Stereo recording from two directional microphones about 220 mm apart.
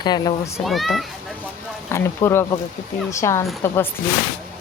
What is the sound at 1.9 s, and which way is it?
Speech, 10° left (ahead or behind).